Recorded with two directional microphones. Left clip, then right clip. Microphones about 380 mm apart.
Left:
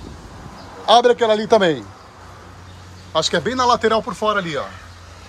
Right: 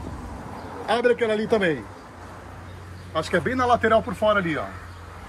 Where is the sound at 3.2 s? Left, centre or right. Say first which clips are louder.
Left 4 dB; centre.